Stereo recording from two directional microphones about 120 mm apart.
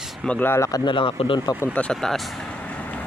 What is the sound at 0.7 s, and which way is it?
Speech, 45° left (ahead or behind).